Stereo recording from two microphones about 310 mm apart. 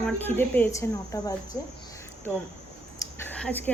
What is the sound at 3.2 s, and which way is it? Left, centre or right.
Speech, centre.